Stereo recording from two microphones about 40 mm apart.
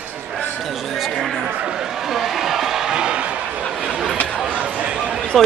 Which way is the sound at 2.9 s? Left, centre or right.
Right.